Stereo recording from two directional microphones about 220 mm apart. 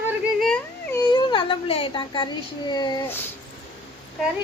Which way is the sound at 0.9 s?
20° left (ahead or behind).